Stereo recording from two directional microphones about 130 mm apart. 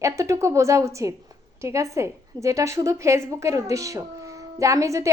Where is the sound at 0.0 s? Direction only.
25° right (ahead or behind).